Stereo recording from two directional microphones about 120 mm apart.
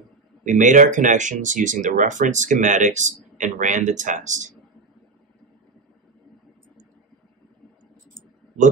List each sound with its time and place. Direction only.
0.5 s speech: 90° right